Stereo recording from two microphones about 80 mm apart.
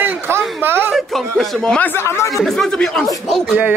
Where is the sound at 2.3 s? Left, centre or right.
Centre.